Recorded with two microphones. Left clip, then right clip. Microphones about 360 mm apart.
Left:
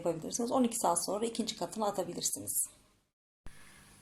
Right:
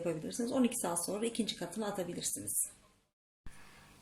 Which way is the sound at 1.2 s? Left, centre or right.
Centre.